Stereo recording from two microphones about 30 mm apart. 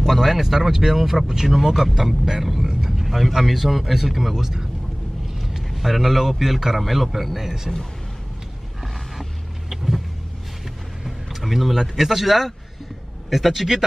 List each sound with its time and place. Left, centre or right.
0.0 s speech: centre
2.8 s vehicle: centre
3.5 s speech: centre
5.8 s speech: centre
9.7 s vehicle: centre
11.1 s vehicle: centre
11.7 s speech: centre